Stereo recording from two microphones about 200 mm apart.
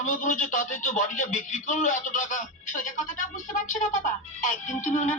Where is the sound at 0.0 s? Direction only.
40° left (ahead or behind).